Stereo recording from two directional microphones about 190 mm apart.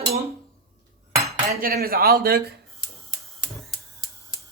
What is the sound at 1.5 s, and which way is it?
Speech, 55° right (ahead or behind).